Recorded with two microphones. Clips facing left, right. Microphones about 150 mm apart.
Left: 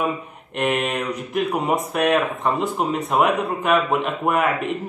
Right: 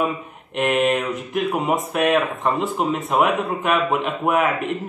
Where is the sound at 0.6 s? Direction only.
Centre (ahead or behind).